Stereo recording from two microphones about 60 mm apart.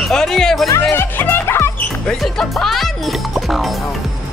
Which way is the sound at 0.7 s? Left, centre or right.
Left.